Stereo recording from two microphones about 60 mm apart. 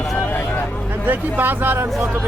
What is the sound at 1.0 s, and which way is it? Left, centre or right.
Speech, right.